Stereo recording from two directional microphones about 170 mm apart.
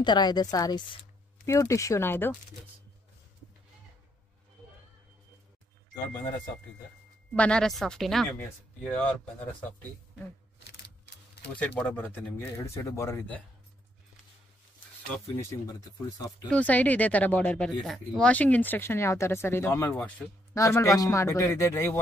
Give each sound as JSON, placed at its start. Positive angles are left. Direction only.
{"t": 0.0, "sound": "speech", "side_deg": 25}
{"t": 7.3, "sound": "speech", "side_deg": 5}
{"t": 11.5, "sound": "speech", "side_deg": 10}
{"t": 15.1, "sound": "speech", "side_deg": 10}
{"t": 15.6, "sound": "speech", "side_deg": 20}
{"t": 16.3, "sound": "speech", "side_deg": 5}